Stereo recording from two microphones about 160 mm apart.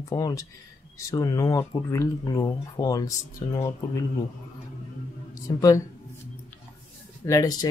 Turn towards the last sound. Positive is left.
turn(degrees=25)  # may be behind; listen again after turning